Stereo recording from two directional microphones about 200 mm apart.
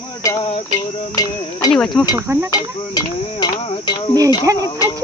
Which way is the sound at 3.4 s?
20° left (ahead or behind).